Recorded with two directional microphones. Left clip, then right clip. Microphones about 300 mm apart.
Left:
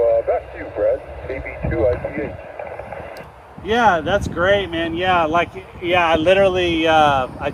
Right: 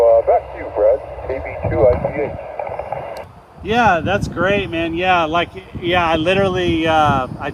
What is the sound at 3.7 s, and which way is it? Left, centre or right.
Speech, centre.